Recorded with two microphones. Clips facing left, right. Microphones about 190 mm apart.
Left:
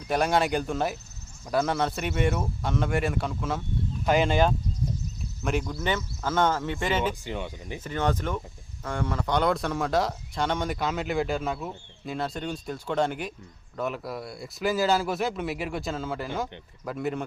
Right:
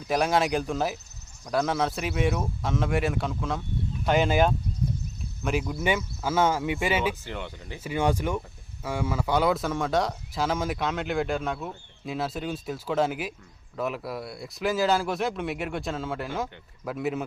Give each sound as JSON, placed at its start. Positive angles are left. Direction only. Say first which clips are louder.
{"t": 0.0, "sound": "speech", "louder": "even", "side_deg": 0}
{"t": 7.3, "sound": "speech", "louder": "left 3 dB", "side_deg": 15}
{"t": 7.9, "sound": "speech", "louder": "right 2 dB", "side_deg": -10}